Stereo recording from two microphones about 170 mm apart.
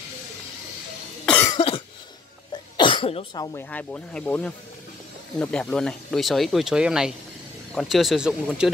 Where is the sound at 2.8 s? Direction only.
30° left (ahead or behind).